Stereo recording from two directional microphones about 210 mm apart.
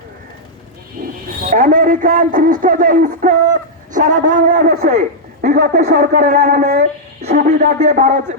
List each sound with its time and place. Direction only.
1.5 s a man's voice: 40° right (ahead or behind)
4.9 s a woman's voice: 35° right (ahead or behind)
7.3 s a man's voice: 45° right (ahead or behind)